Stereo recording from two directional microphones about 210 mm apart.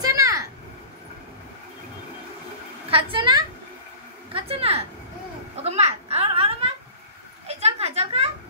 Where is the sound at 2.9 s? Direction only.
25° right (ahead or behind).